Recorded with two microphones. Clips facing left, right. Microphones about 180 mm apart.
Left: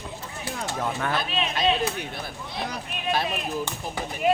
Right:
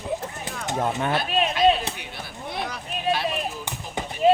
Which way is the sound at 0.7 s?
25° right (ahead or behind).